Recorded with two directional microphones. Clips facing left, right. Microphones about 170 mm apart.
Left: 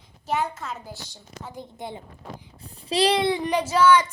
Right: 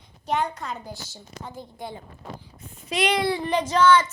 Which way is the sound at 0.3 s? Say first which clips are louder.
Right 1 dB; 5° left (ahead or behind).